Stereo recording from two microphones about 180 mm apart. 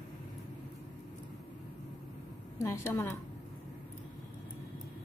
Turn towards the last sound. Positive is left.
turn(degrees=15)  # may be behind; listen again after turning